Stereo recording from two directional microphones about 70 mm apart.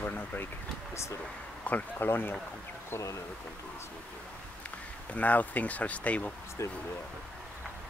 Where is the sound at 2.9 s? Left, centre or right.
Left.